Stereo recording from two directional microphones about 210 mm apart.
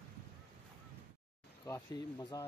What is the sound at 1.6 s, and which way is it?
Speech, 15° left (ahead or behind).